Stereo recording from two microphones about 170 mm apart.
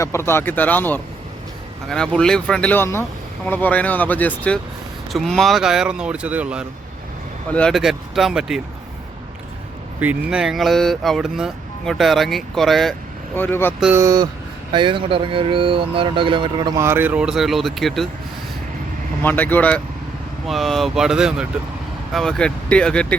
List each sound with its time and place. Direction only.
0.0 s speech: 15° left (ahead or behind); by 6.7 s 5° right (ahead or behind)
7.5 s speech: 5° left (ahead or behind)
10.0 s speech: 5° right (ahead or behind)
13.3 s speech: 10° left (ahead or behind)
13.9 s speech: 20° right (ahead or behind)
16.8 s speech: 10° right (ahead or behind)
19.2 s speech: 10° left (ahead or behind)